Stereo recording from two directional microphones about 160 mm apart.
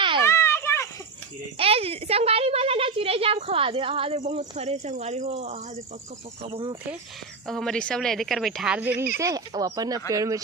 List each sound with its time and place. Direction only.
0.3 s a sound: 15° left (ahead or behind)
1.5 s a woman's voice: 35° right (ahead or behind)
7.4 s speech: centre (ahead or behind); by 10.4 s 20° right (ahead or behind)